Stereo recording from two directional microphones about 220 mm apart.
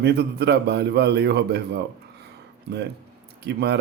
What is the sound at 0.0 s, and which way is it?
A man's voice, 50° right (ahead or behind).